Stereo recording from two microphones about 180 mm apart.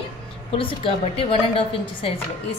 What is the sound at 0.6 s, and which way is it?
A woman's voice, 30° left (ahead or behind).